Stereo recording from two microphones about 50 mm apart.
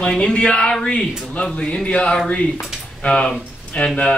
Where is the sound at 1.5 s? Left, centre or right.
Left.